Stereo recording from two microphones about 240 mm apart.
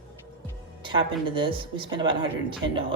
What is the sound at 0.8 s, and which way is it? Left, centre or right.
Speech, right.